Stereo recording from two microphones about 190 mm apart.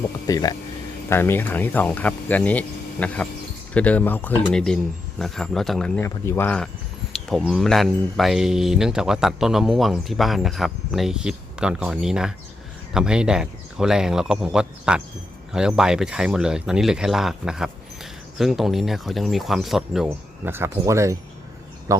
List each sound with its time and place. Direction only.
0.3 s speech: 20° left (ahead or behind); by 5.9 s centre (ahead or behind)
6.0 s speech: 10° left (ahead or behind); by 22.0 s 20° right (ahead or behind)